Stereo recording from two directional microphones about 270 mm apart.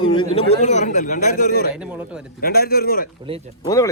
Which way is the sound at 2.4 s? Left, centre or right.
Left.